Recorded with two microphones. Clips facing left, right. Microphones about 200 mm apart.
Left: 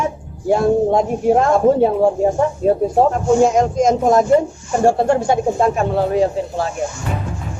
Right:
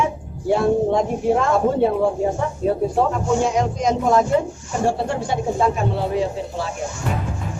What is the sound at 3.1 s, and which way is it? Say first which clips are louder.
Speech: left 6 dB; 45° left (ahead or behind).